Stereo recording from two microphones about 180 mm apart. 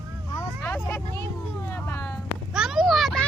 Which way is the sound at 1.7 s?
10° left (ahead or behind).